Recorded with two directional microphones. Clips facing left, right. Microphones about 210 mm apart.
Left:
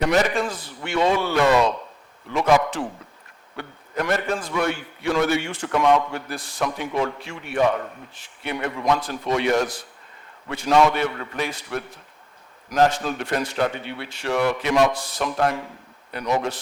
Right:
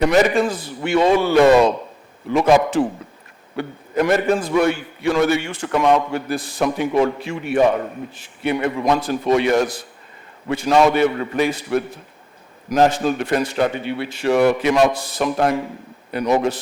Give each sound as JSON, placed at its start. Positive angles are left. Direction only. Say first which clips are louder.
{"t": 0.2, "sound": "a man's voice", "louder": "right 6 dB", "side_deg": -5}
{"t": 1.4, "sound": "a man's voice", "louder": "right 7 dB", "side_deg": -20}
{"t": 2.2, "sound": "a man's voice", "louder": "right 4 dB", "side_deg": -5}